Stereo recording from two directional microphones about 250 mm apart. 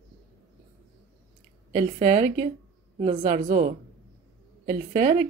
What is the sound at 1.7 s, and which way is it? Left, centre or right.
A woman's voice, right.